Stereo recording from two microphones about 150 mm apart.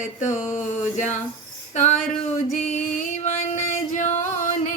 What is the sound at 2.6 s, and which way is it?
Music, 65° left (ahead or behind).